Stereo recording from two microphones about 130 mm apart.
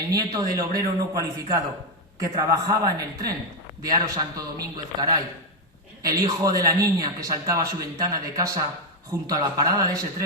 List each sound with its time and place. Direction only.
0.1 s a man's voice: 30° right (ahead or behind)